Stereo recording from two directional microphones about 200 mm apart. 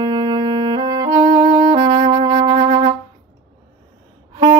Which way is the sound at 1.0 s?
20° right (ahead or behind).